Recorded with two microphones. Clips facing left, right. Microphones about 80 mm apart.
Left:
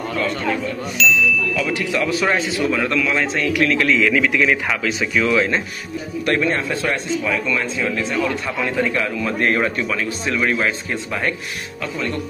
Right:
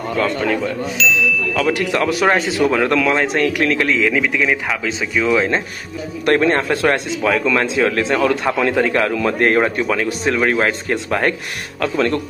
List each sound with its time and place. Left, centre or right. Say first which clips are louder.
0.9 s ding: left 1 dB; centre
1.5 s speech: right 4 dB; right
2.6 s a man's voice: right 7 dB; right
4.2 s speech: even; centre
6.2 s a man's voice: right 5 dB; right
6.9 s speech: right 4 dB; right
8.9 s a man's voice: right 5 dB; right